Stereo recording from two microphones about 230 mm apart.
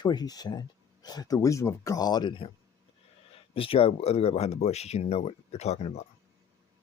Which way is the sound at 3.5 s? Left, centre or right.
Left.